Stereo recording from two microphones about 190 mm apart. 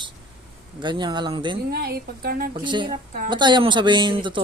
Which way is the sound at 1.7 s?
55° right (ahead or behind).